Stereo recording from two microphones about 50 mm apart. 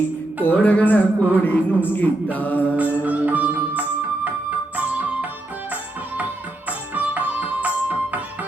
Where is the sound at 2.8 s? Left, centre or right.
Right.